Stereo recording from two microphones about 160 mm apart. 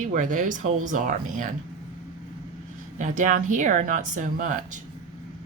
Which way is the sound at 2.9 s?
50° right (ahead or behind).